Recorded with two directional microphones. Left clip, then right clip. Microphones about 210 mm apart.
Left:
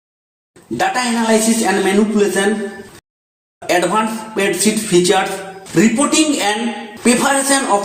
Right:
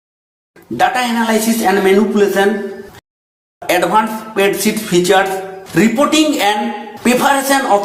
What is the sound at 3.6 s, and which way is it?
Music, 15° right (ahead or behind).